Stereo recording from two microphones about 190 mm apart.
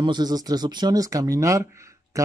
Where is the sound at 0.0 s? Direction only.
20° right (ahead or behind).